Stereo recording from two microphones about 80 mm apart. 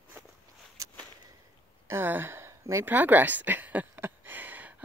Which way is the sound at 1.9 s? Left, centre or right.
Right.